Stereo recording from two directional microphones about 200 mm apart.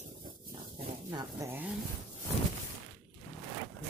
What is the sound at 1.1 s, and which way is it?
Speech, 20° right (ahead or behind).